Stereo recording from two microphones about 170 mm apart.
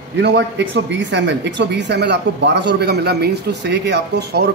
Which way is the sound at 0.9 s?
90° right.